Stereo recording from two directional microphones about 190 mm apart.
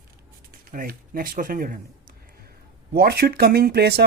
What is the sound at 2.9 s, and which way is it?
Speech, 55° right (ahead or behind).